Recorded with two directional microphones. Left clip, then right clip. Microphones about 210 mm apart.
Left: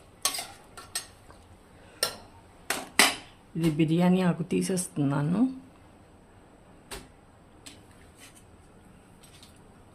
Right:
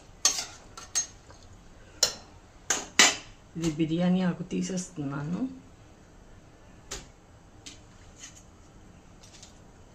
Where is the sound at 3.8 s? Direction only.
50° left (ahead or behind).